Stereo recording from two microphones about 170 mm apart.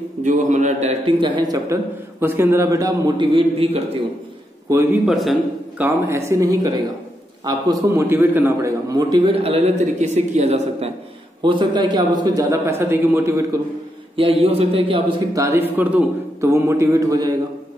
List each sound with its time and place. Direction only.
0.2 s a man's voice: 45° right (ahead or behind)
5.0 s a man's voice: centre (ahead or behind)
5.8 s a man's voice: 15° right (ahead or behind)
7.9 s a man's voice: 10° right (ahead or behind)
9.3 s a man's voice: 35° right (ahead or behind)
11.4 s a man's voice: 25° right (ahead or behind)
14.1 s a man's voice: 35° right (ahead or behind)
15.3 s a man's voice: 15° right (ahead or behind)